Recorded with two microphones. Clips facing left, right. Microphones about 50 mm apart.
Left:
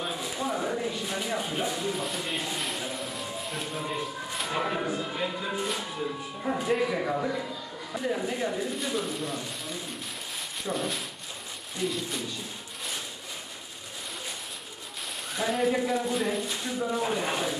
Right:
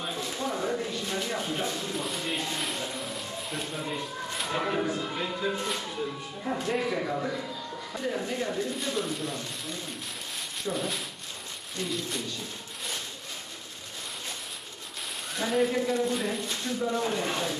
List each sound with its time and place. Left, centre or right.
0.0 s a sound: centre
6.4 s a man's voice: centre
15.3 s speech: centre